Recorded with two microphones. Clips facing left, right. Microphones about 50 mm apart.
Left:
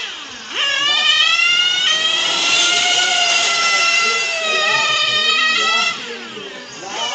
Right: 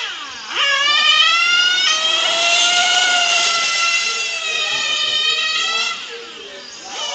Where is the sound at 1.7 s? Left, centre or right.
Centre.